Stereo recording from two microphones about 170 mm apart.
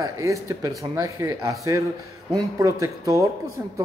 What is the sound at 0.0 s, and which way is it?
A man's voice, 20° right (ahead or behind).